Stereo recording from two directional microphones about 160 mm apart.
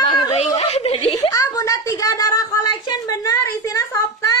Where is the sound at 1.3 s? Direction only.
25° left (ahead or behind).